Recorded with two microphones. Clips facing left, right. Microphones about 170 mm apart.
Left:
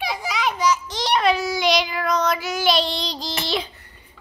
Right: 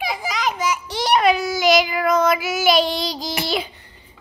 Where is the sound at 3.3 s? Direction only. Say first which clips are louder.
Right 1 dB; 10° right (ahead or behind).